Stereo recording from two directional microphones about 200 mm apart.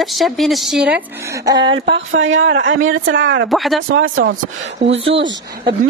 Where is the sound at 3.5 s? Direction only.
Centre (ahead or behind).